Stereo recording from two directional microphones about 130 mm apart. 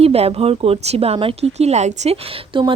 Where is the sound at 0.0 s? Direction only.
50° right (ahead or behind).